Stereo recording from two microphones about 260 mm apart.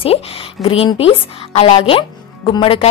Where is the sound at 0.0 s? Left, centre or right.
Left.